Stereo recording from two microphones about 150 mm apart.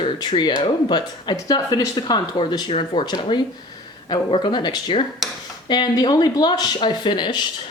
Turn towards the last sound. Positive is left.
turn(degrees=30)  # may be behind; listen again after turning